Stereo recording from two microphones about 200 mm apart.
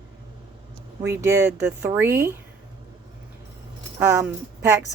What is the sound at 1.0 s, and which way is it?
Speech, 15° right (ahead or behind).